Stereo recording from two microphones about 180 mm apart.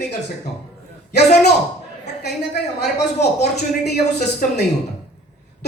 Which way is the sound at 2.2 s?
65° left (ahead or behind).